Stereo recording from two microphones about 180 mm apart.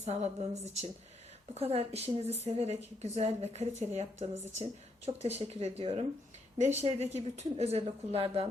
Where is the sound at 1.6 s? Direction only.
35° right (ahead or behind).